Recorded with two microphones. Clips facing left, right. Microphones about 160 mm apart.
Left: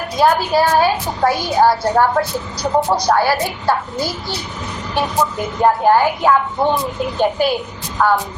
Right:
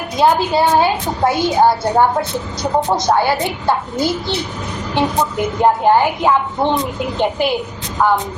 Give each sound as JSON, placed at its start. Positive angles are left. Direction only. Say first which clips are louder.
{"t": 0.2, "sound": "a child's voice", "louder": "right 1 dB", "side_deg": -20}